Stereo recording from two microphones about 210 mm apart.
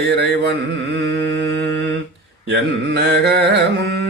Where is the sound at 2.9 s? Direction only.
55° right (ahead or behind).